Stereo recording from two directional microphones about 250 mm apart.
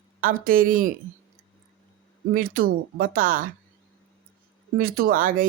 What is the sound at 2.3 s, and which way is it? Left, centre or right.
Speech, right.